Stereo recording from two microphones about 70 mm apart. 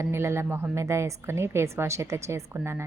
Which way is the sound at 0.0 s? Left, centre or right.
Right.